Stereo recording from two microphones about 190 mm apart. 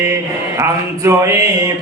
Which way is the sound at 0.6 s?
15° right (ahead or behind).